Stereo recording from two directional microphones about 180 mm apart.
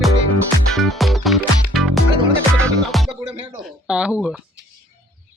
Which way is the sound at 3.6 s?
5° right (ahead or behind).